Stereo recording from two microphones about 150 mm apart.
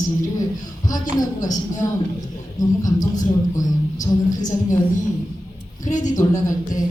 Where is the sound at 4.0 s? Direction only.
55° left (ahead or behind).